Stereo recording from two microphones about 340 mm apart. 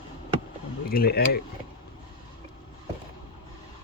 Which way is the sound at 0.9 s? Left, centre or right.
Left.